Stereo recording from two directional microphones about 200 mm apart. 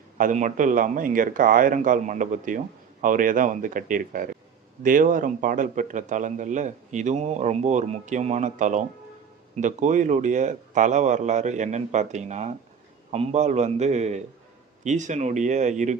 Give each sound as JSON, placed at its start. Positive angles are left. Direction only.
{"t": 0.2, "sound": "a man's voice", "side_deg": -40}